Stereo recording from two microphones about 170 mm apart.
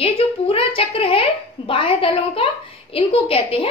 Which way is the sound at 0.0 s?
35° left (ahead or behind).